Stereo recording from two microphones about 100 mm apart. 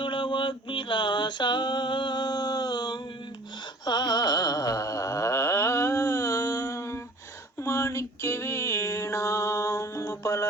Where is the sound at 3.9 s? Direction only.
45° left (ahead or behind).